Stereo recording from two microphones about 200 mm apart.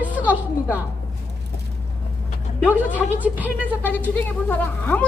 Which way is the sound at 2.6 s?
10° right (ahead or behind).